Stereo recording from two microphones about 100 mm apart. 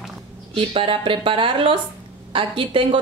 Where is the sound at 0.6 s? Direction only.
60° right (ahead or behind).